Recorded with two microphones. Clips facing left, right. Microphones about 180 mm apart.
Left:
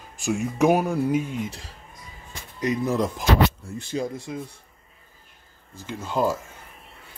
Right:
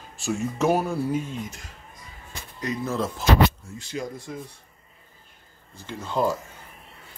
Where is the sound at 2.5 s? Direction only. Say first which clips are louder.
Left 4 dB; 20° left (ahead or behind).